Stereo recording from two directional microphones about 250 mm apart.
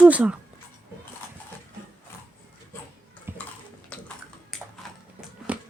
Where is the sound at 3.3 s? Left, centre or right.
Centre.